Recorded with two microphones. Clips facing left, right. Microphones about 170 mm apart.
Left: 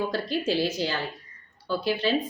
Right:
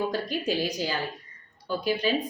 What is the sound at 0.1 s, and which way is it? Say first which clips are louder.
A woman's voice: left 2 dB; 15° right (ahead or behind).